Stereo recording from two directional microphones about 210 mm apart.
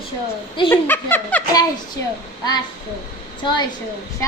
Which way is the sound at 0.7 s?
10° left (ahead or behind).